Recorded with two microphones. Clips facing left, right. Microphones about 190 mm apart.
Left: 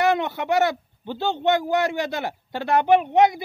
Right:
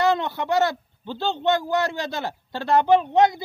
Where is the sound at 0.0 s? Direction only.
15° left (ahead or behind).